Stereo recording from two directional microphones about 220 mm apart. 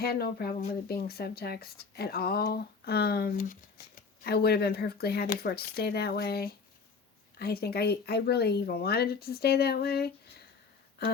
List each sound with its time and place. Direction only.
0.0 s speech: 45° left (ahead or behind)